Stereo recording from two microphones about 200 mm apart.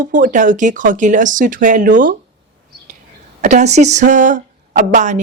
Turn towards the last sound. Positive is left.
turn(degrees=-35)  # may be behind; listen again after turning